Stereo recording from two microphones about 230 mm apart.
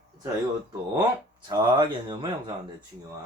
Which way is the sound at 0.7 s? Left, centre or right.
Centre.